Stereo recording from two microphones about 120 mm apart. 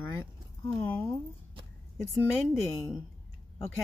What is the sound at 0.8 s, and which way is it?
Speech, 15° left (ahead or behind).